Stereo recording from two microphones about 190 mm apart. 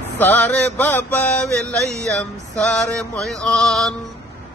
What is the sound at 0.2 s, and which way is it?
Mantra, 10° left (ahead or behind).